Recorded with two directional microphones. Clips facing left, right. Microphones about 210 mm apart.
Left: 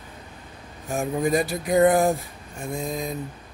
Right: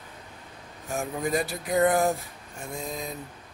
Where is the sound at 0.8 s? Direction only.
15° left (ahead or behind).